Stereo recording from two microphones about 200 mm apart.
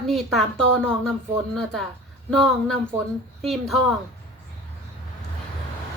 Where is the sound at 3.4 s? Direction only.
Centre (ahead or behind).